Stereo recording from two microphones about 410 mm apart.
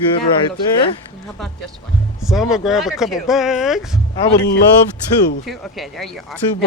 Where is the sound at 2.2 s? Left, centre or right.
Centre.